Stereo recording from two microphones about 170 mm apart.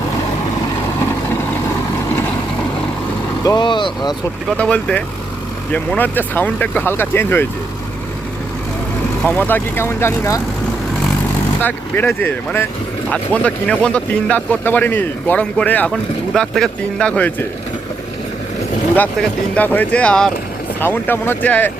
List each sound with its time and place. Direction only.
3.4 s speech: 25° left (ahead or behind)
4.4 s speech: 5° left (ahead or behind)
9.2 s speech: 10° left (ahead or behind)
11.6 s speech: 10° left (ahead or behind)
19.5 s speech: 10° left (ahead or behind)